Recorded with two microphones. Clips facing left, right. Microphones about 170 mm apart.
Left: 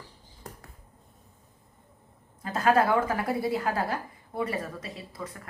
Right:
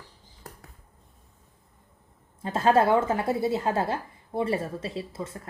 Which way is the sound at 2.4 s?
25° right (ahead or behind).